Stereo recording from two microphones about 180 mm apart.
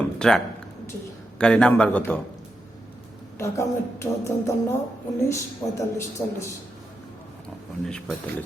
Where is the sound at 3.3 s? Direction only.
15° left (ahead or behind).